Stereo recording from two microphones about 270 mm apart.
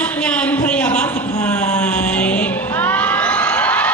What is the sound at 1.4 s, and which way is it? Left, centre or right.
Crowd, centre.